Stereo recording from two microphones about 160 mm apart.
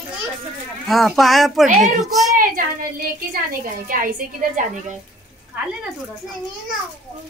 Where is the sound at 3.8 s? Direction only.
60° right (ahead or behind).